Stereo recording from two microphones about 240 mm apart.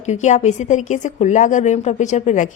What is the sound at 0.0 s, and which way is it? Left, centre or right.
Speech, left.